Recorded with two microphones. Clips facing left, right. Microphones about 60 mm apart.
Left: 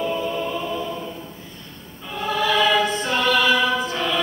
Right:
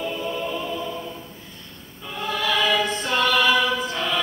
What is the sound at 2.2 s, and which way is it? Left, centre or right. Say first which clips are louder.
Choir: left 3 dB; centre.